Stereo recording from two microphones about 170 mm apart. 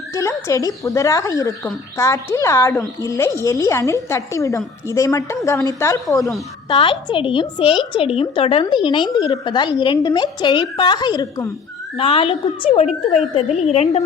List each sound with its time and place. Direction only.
0.1 s a woman's voice: 15° left (ahead or behind)
6.7 s a woman's voice: 30° left (ahead or behind)